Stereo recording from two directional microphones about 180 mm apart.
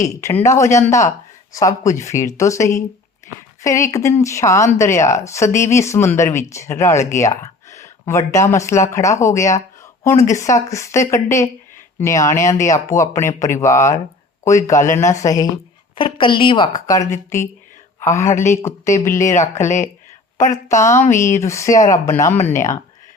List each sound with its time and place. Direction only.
0.0 s a woman's voice: 15° left (ahead or behind)
19.3 s speech: 40° left (ahead or behind)
20.7 s speech: 15° left (ahead or behind)